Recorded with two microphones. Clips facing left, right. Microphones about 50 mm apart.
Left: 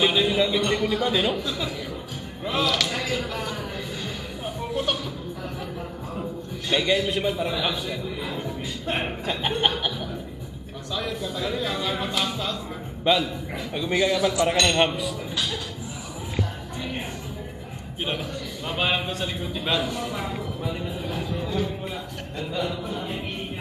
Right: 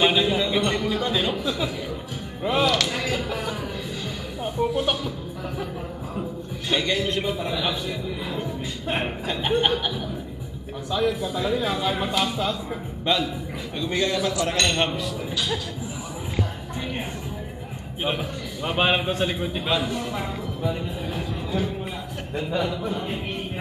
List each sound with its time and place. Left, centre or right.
0.0 s a sound: centre
0.5 s speech: centre
1.4 s speech: centre
2.6 s a sound: centre
4.7 s speech: centre
6.9 s a man's voice: centre
11.0 s speech: centre
13.0 s a man's voice: centre
18.7 s a man's voice: centre
19.6 s a man's voice: centre